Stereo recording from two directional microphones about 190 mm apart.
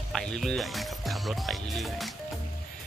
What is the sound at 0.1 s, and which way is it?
Speech, centre (ahead or behind).